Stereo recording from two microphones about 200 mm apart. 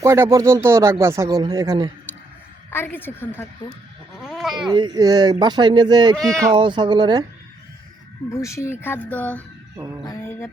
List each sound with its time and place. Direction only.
0.0 s speech: 15° right (ahead or behind)
2.6 s speech: 10° left (ahead or behind)
4.2 s bleat: centre (ahead or behind)
4.7 s speech: 20° right (ahead or behind)
6.1 s speech: centre (ahead or behind)
6.5 s speech: 25° right (ahead or behind)
8.3 s speech: 15° left (ahead or behind)
9.7 s speech: 15° right (ahead or behind)
10.1 s speech: 10° left (ahead or behind)